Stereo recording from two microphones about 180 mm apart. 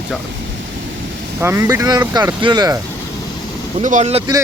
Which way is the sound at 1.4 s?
15° right (ahead or behind).